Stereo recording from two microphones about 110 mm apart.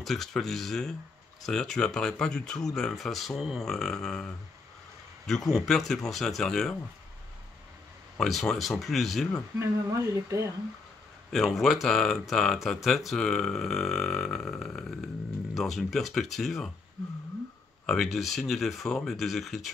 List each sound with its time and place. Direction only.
0.0 s speech: 5° left (ahead or behind)
8.2 s speech: 5° left (ahead or behind)
9.6 s speech: 30° right (ahead or behind)
11.3 s speech: centre (ahead or behind)
17.8 s speech: centre (ahead or behind)